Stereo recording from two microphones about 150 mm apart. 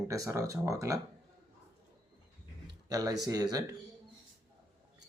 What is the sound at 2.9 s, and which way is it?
Speech, 25° right (ahead or behind).